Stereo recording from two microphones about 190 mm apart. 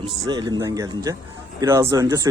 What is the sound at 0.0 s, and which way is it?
Speech, 20° right (ahead or behind).